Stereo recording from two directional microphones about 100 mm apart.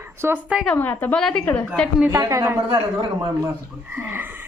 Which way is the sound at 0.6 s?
15° left (ahead or behind).